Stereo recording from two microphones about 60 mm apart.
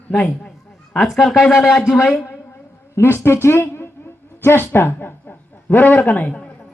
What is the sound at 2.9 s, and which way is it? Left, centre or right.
A man's voice, left.